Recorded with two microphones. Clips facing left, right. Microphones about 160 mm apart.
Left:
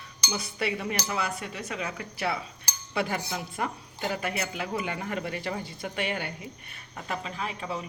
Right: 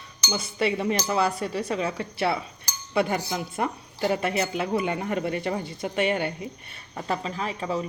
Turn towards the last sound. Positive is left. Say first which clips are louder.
# right 5 dB
turn(degrees=-35)  # may be behind; listen again after turning